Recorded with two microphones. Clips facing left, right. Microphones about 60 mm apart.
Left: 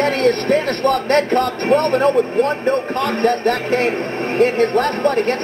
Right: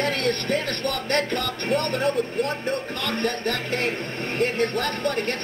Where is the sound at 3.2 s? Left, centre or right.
Left.